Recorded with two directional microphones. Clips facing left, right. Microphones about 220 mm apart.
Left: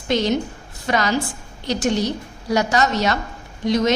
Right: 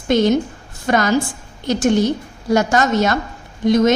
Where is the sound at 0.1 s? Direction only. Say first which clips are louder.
Right 5 dB; 50° right (ahead or behind).